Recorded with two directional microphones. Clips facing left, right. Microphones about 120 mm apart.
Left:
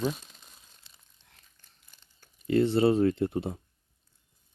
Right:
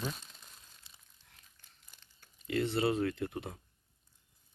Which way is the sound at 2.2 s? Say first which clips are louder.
Left 9 dB; 30° left (ahead or behind).